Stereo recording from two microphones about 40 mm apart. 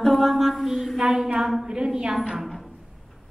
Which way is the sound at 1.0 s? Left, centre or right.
Centre.